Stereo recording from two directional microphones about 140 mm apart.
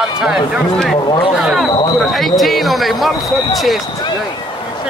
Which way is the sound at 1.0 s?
30° left (ahead or behind).